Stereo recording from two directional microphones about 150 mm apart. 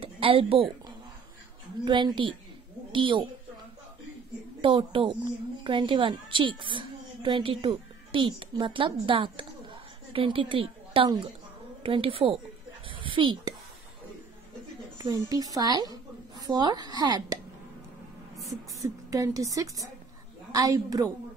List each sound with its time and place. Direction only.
0.0 s a woman's voice: 40° right (ahead or behind)
1.9 s a woman's voice: 30° right (ahead or behind)
4.6 s a woman's voice: 35° right (ahead or behind)
12.8 s a sound: 35° right (ahead or behind)
15.0 s a woman's voice: 25° right (ahead or behind)
18.3 s a sound: centre (ahead or behind)
18.8 s a woman's voice: 20° right (ahead or behind)